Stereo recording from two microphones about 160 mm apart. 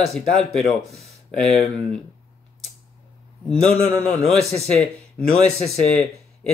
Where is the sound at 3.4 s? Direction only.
5° left (ahead or behind).